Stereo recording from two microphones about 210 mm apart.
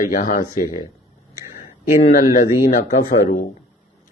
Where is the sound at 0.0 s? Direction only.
40° left (ahead or behind).